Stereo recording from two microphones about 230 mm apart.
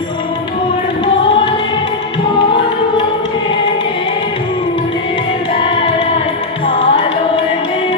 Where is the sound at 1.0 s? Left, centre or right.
Left.